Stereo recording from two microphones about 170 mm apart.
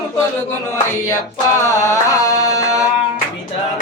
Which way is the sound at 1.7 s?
15° left (ahead or behind).